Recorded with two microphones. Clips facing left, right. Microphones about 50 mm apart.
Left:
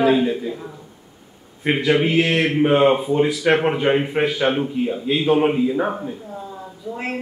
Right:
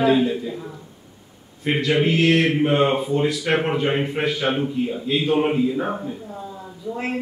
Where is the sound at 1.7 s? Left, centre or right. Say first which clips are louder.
Left 3 dB; centre.